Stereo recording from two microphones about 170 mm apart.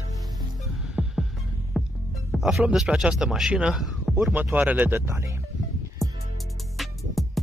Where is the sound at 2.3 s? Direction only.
Centre (ahead or behind).